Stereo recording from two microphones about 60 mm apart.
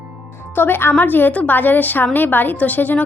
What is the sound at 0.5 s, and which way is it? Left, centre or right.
A woman's voice, left.